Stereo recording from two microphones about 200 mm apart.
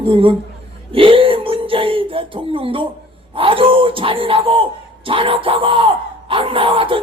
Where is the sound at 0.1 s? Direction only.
25° right (ahead or behind).